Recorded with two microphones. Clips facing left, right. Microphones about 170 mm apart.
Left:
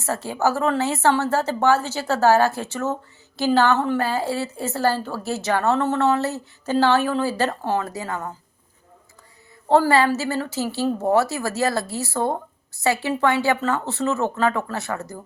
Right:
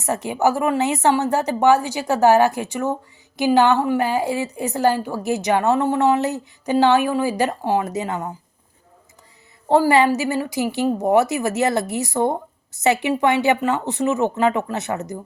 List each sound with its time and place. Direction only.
0.0 s speech: 15° right (ahead or behind)
9.6 s speech: 15° right (ahead or behind)